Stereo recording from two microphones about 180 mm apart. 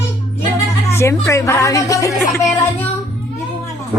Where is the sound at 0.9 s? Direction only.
15° left (ahead or behind).